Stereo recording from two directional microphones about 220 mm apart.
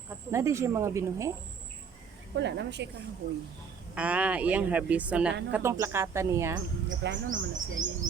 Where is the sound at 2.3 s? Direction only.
50° right (ahead or behind).